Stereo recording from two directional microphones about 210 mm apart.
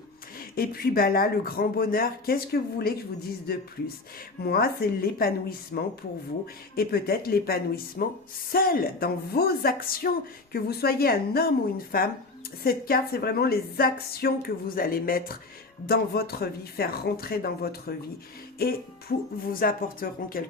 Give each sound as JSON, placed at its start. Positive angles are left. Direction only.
{"t": 0.3, "sound": "a woman's voice", "side_deg": 45}
{"t": 4.4, "sound": "a woman's voice", "side_deg": 45}